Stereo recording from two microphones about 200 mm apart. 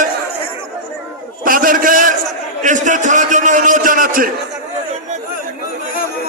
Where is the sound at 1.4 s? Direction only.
45° right (ahead or behind).